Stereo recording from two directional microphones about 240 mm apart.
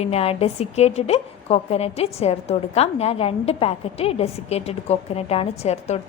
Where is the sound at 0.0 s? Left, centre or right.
Left.